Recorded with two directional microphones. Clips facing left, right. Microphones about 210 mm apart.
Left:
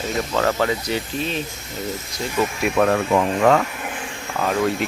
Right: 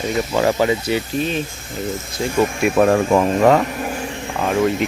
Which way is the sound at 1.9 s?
25° right (ahead or behind).